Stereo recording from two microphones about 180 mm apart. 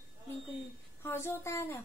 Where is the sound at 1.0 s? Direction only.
15° left (ahead or behind).